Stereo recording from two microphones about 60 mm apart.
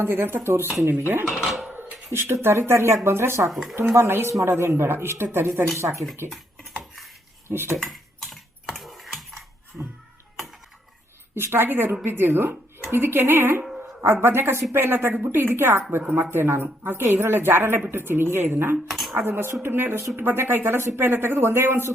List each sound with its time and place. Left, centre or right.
0.0 s a woman's voice: right
1.4 s speech: centre
2.1 s speech: right
3.5 s speech: centre
3.9 s a woman's voice: right
7.4 s dishes: right
7.8 s typing: centre
11.3 s a woman's voice: right
18.9 s cutlery: centre
19.1 s a woman's voice: right